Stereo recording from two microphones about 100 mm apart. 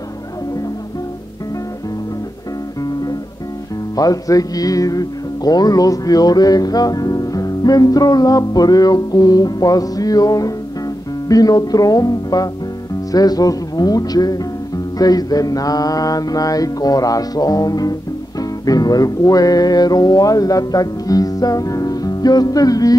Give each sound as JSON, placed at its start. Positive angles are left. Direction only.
{"t": 3.9, "sound": "music", "side_deg": 35}